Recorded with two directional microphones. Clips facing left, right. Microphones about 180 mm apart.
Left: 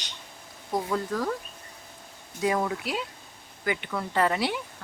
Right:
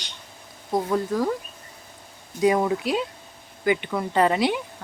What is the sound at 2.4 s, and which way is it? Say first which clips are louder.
A woman's voice: right 6 dB; 20° right (ahead or behind).